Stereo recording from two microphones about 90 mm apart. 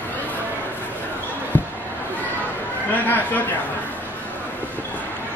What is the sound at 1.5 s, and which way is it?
Basketball bounce, 20° left (ahead or behind).